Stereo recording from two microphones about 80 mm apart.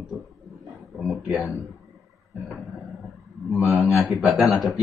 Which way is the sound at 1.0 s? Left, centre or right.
Centre.